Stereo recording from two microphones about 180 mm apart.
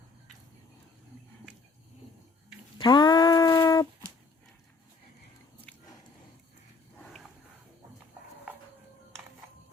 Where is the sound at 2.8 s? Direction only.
25° left (ahead or behind).